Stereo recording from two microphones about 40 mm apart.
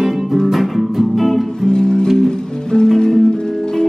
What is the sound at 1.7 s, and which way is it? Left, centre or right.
Music, left.